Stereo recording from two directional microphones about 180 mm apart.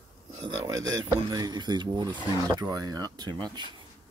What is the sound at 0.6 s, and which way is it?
Speech, 20° right (ahead or behind).